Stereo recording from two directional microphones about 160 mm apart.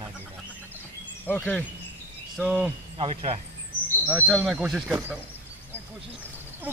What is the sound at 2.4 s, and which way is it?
Speech, 5° right (ahead or behind).